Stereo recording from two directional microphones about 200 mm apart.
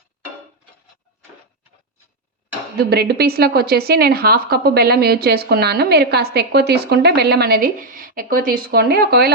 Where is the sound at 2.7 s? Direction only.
55° right (ahead or behind).